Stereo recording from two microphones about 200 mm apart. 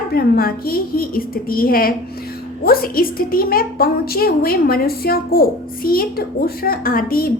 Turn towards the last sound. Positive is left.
turn(degrees=45)  # may be behind; listen again after turning